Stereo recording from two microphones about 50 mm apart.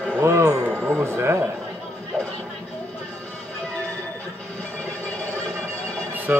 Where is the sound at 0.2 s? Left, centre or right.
Right.